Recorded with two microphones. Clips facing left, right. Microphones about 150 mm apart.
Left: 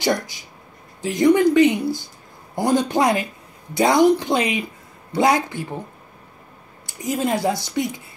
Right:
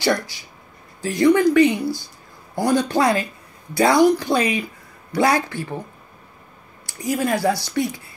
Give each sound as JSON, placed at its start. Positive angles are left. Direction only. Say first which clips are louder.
{"t": 0.0, "sound": "speech", "louder": "right 1 dB", "side_deg": 20}
{"t": 6.9, "sound": "speech", "louder": "right 1 dB", "side_deg": 20}